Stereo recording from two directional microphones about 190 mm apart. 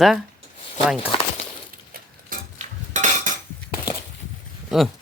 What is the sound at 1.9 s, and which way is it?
Cutlery, 45° right (ahead or behind).